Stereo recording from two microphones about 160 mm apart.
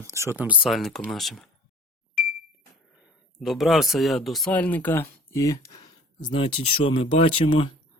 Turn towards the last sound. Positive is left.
turn(degrees=35)  # may be behind; listen again after turning